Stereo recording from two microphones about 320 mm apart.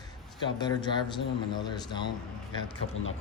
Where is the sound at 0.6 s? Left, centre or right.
Centre.